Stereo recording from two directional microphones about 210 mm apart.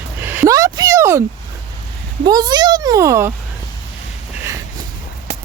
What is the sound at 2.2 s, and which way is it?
A child's voice, 20° right (ahead or behind).